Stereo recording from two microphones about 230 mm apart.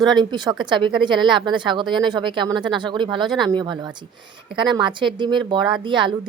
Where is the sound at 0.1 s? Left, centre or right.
Centre.